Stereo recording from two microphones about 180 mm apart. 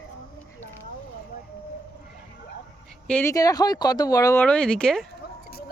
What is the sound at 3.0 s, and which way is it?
Speech, 10° left (ahead or behind).